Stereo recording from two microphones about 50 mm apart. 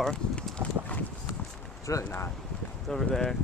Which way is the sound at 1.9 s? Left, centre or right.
Left.